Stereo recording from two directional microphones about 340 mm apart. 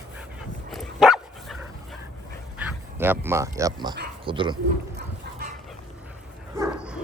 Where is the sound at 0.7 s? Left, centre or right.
Centre.